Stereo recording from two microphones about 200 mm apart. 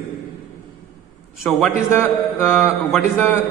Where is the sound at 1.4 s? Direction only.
5° left (ahead or behind).